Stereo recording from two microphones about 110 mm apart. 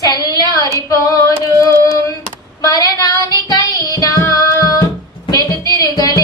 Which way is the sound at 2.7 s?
35° left (ahead or behind).